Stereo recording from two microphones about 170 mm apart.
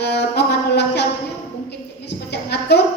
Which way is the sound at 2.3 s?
75° left (ahead or behind).